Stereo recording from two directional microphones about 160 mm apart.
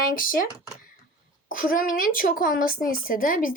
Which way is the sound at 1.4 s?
60° left (ahead or behind).